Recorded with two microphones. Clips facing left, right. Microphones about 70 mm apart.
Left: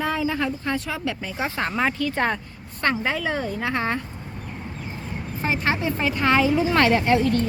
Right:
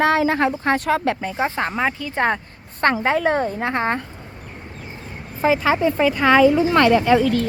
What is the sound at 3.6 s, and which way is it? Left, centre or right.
Speech, right.